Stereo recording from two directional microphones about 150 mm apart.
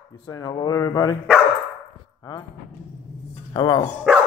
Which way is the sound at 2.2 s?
25° left (ahead or behind).